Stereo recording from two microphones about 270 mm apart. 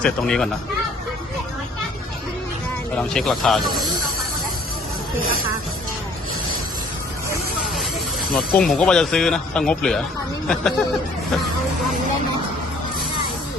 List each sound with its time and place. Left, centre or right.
0.0 s speech: centre
3.0 s speech: centre
5.2 s speech: right
8.4 s speech: centre